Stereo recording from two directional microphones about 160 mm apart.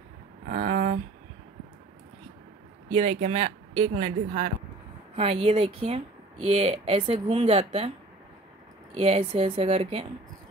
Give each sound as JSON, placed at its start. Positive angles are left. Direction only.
{"t": 0.5, "sound": "a sound", "side_deg": -55}
{"t": 2.9, "sound": "speech", "side_deg": -45}
{"t": 5.1, "sound": "speech", "side_deg": -40}
{"t": 8.9, "sound": "speech", "side_deg": -40}